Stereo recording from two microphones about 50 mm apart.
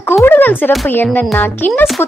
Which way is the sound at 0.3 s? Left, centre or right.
Left.